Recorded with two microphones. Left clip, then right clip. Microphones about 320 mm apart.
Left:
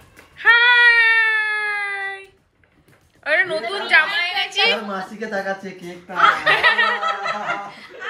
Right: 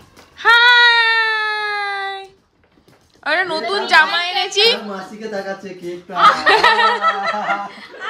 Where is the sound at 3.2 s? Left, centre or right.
Centre.